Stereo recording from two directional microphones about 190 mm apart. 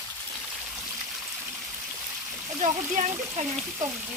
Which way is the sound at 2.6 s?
40° right (ahead or behind).